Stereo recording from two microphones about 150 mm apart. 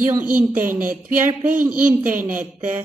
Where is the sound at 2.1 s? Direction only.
65° right (ahead or behind).